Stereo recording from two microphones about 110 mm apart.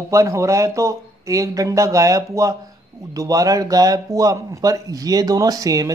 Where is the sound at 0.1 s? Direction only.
30° right (ahead or behind).